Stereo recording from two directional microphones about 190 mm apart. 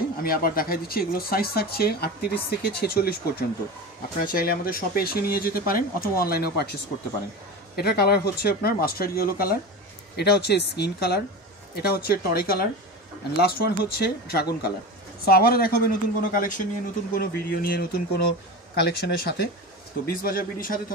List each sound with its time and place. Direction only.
0.2 s speech: 50° left (ahead or behind)